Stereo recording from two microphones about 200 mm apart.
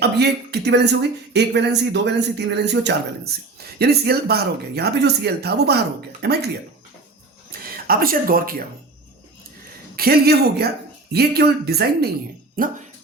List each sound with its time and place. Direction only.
0.0 s speech: 55° right (ahead or behind)
7.5 s a sound: 50° right (ahead or behind)
7.9 s speech: 45° right (ahead or behind)
9.9 s speech: 50° right (ahead or behind)